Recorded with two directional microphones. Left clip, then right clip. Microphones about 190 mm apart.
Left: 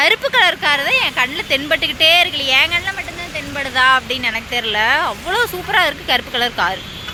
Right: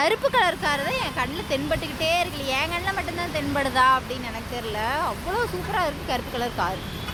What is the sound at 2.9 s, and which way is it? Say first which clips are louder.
Speech: left 2 dB; 15° right (ahead or behind).